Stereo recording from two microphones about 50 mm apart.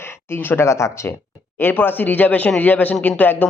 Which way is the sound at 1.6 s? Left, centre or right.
Left.